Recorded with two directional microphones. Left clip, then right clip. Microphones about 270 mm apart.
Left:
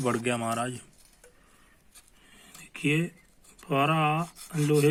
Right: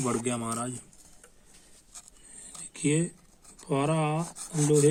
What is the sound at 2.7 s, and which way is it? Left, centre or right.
Speech, left.